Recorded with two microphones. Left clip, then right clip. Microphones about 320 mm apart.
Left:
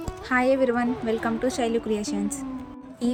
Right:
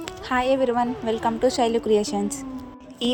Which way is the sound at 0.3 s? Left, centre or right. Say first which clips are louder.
Even; right.